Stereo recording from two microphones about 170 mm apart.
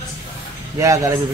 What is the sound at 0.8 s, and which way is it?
Speech, 20° right (ahead or behind).